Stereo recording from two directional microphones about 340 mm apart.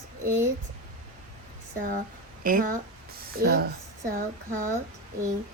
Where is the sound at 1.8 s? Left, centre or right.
Right.